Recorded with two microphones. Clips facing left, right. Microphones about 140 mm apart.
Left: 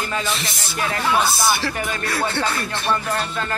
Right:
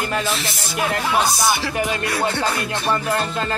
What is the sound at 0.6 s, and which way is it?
Speech, 5° right (ahead or behind).